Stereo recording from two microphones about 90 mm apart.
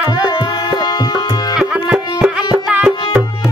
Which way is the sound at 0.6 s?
50° left (ahead or behind).